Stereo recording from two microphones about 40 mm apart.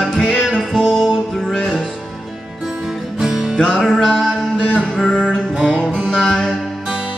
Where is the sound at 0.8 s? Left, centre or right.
Centre.